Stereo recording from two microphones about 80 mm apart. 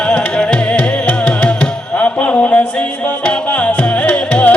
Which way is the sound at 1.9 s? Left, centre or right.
Centre.